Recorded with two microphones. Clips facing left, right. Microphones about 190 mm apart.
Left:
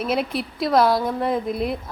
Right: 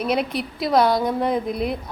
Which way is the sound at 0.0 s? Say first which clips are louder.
Right 1 dB; centre (ahead or behind).